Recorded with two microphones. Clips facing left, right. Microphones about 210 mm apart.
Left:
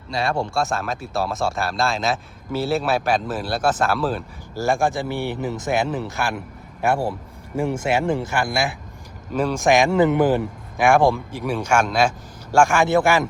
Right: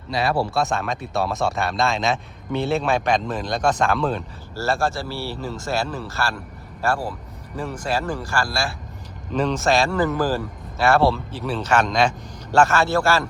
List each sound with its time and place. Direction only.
0.1 s speech: centre (ahead or behind)
4.5 s speech: 15° left (ahead or behind)
9.3 s speech: 10° left (ahead or behind)